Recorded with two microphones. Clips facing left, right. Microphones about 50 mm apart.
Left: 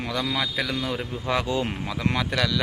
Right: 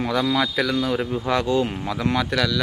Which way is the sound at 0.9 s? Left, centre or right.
Centre.